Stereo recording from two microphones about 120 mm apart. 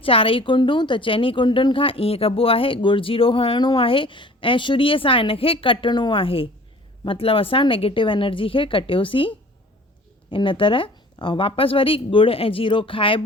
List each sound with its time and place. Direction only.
0.0 s speech: 50° left (ahead or behind)
10.3 s speech: 45° left (ahead or behind)